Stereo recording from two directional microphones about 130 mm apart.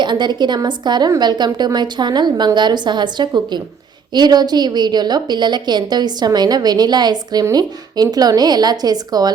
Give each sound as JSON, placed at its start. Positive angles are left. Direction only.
{"t": 0.0, "sound": "a woman's voice", "side_deg": -35}